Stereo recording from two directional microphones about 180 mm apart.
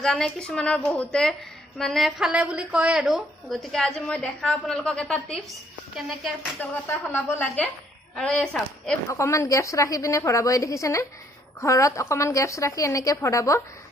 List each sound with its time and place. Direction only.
0.0 s a woman's voice: 5° left (ahead or behind)
6.6 s a woman's voice: 10° left (ahead or behind)
9.0 s a woman's voice: 15° left (ahead or behind)